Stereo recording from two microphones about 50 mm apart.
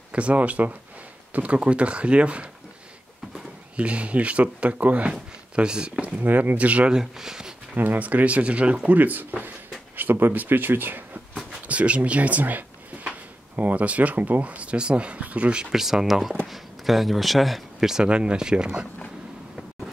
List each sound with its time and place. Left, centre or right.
0.1 s speech: right
6.2 s speech: right
6.9 s speech: centre
7.7 s speech: right
8.9 s speech: right
11.6 s speech: right
15.6 s speech: centre
17.7 s speech: centre